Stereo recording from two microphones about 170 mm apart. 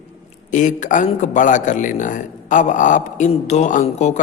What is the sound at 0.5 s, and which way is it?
A man's voice, 45° left (ahead or behind).